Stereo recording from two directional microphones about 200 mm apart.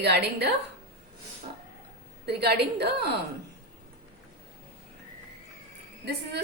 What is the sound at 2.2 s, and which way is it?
Speech, 55° right (ahead or behind).